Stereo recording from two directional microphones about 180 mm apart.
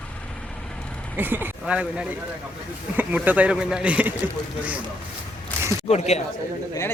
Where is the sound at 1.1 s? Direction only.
10° right (ahead or behind).